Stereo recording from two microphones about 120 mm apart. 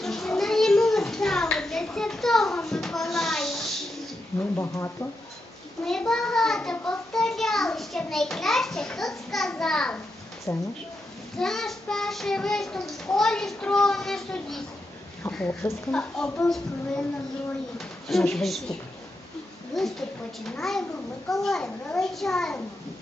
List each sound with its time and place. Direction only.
0.0 s a sound: 5° left (ahead or behind)
4.4 s speech: 20° left (ahead or behind)
5.8 s a child's voice: 5° left (ahead or behind)
10.5 s speech: 25° left (ahead or behind)
11.3 s a child's voice: 5° left (ahead or behind)
17.7 s a child's voice: centre (ahead or behind)